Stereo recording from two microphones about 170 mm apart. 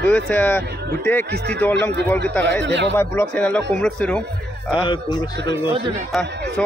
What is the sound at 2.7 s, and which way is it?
Speech, 90° right.